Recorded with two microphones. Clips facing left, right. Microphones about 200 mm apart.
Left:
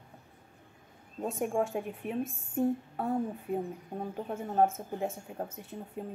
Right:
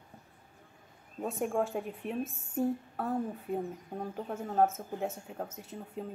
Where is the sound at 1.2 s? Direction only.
Centre (ahead or behind).